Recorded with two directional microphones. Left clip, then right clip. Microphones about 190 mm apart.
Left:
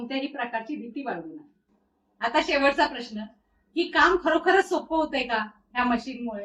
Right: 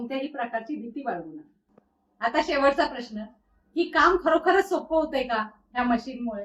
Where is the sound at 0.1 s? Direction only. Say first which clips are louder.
Even; 10° right (ahead or behind).